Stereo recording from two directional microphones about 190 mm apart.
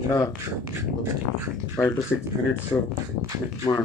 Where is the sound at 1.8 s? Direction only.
15° left (ahead or behind).